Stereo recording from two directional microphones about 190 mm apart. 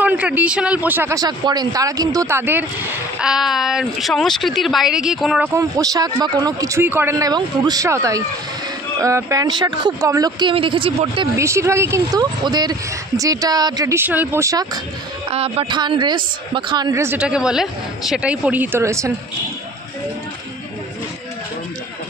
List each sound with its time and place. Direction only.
0.0 s a man's voice: 10° right (ahead or behind)
5.5 s a woman's voice: 15° right (ahead or behind)
11.3 s a woman's voice: 15° right (ahead or behind)
15.3 s a woman's voice: 30° right (ahead or behind); by 19.1 s 15° right (ahead or behind)